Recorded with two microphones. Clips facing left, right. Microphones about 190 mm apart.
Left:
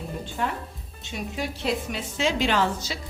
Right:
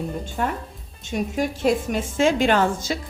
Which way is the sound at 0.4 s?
45° right (ahead or behind).